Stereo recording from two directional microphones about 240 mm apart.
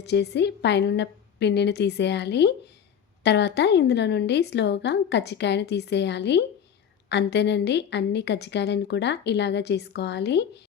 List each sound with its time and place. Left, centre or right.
0.0 s a woman's voice: left